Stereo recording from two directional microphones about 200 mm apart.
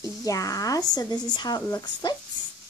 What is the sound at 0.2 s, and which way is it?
Speech, 15° left (ahead or behind).